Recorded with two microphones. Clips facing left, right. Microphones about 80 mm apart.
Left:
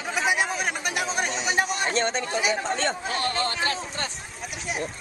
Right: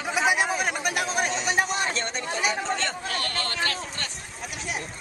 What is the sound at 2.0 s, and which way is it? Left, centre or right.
Speech, left.